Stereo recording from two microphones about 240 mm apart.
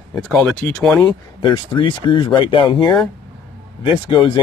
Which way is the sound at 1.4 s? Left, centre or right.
Centre.